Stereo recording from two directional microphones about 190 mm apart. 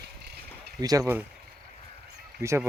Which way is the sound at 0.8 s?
20° right (ahead or behind).